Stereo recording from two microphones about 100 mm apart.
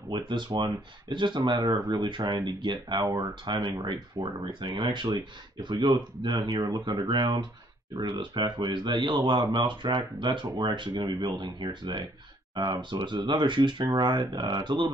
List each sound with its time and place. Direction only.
0.1 s speech: 50° right (ahead or behind)